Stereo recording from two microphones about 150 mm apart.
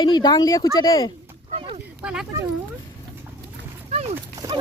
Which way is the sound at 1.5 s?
40° right (ahead or behind).